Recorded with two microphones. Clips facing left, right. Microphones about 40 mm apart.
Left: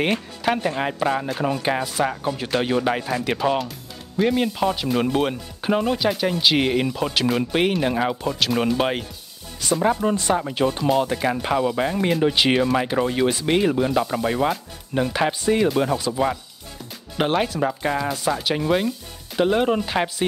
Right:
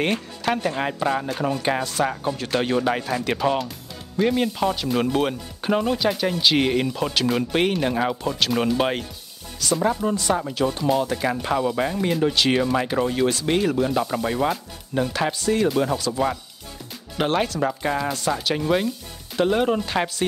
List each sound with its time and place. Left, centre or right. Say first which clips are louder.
0.0 s speech: left 1 dB; centre
9.6 s speech: left 2 dB; left
11.4 s speech: left 1 dB; centre
15.7 s speech: left 1 dB; centre